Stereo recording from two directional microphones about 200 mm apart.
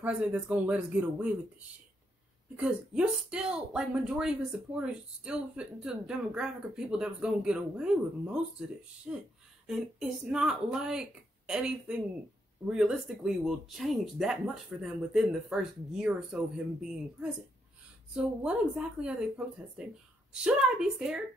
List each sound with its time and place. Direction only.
0.0 s speech: 5° right (ahead or behind)
2.5 s speech: 5° right (ahead or behind)
20.4 s speech: 5° right (ahead or behind)